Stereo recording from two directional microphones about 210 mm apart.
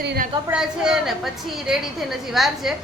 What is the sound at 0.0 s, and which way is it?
Speech, 55° right (ahead or behind).